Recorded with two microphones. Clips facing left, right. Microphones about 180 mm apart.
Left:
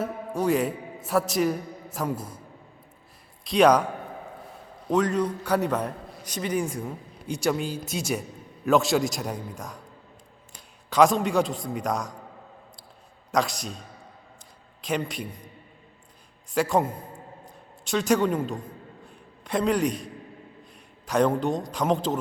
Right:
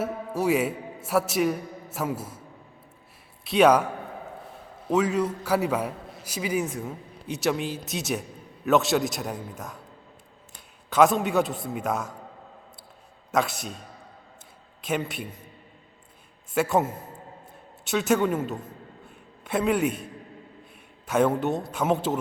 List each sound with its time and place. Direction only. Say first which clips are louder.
0.0 s a man's voice: even; 5° right (ahead or behind)
3.4 s a man's voice: even; 5° right (ahead or behind)
4.9 s a man's voice: even; 5° right (ahead or behind)
10.8 s a man's voice: even; centre (ahead or behind)
13.3 s a man's voice: even; 5° right (ahead or behind)
14.8 s a man's voice: even; 5° right (ahead or behind)
16.6 s a man's voice: even; 5° right (ahead or behind)
21.1 s a man's voice: even; 5° right (ahead or behind)